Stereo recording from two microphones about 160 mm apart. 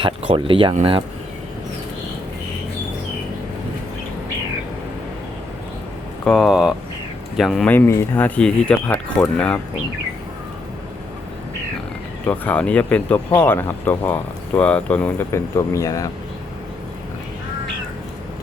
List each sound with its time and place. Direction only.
0.0 s speech: 30° right (ahead or behind)
6.2 s speech: centre (ahead or behind)
7.7 s speech: 15° left (ahead or behind)
12.2 s speech: 10° left (ahead or behind)
15.5 s speech: 20° left (ahead or behind)